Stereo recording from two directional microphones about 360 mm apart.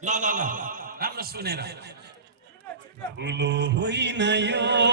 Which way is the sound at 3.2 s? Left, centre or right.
Right.